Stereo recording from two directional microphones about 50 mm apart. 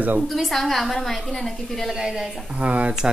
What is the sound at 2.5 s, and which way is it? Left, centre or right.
Speech, right.